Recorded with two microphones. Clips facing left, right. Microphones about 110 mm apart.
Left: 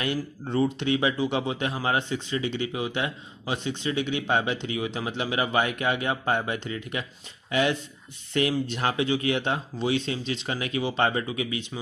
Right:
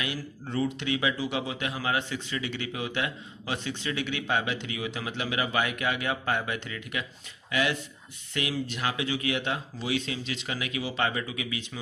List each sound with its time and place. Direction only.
0.5 s a man's voice: 30° left (ahead or behind)
8.3 s speech: 35° left (ahead or behind)